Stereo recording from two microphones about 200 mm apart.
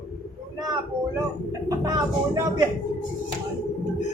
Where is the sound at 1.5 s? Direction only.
15° right (ahead or behind).